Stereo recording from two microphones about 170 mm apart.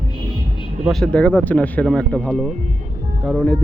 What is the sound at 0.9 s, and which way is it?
Speech, 5° left (ahead or behind).